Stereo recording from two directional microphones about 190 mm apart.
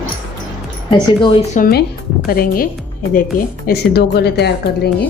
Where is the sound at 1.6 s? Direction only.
55° left (ahead or behind).